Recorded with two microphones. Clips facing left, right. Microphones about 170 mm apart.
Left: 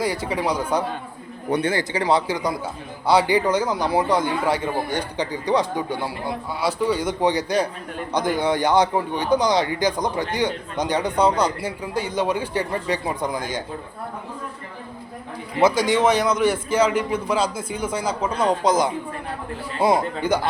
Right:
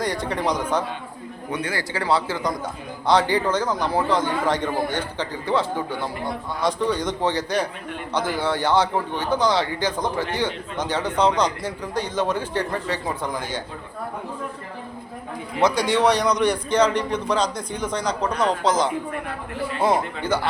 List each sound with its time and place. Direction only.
0.0 s a man's voice: 5° left (ahead or behind)
1.5 s speech: 35° left (ahead or behind)
1.7 s a man's voice: 20° left (ahead or behind)
15.5 s a man's voice: centre (ahead or behind)